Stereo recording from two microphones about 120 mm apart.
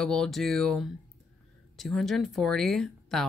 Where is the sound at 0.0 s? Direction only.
5° left (ahead or behind).